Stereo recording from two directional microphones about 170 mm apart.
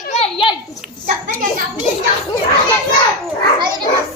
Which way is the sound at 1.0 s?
50° right (ahead or behind).